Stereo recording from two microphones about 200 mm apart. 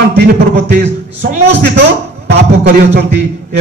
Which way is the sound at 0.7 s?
60° right (ahead or behind).